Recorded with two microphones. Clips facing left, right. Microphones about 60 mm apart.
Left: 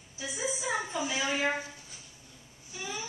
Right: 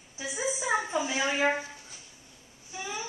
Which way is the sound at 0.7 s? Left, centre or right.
Right.